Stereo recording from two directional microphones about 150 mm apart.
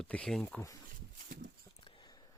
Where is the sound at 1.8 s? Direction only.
30° left (ahead or behind).